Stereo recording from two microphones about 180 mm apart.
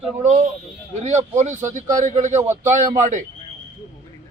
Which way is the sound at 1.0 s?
40° right (ahead or behind).